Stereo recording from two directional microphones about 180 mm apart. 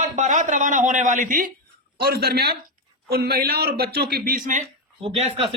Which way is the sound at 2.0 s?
60° right (ahead or behind).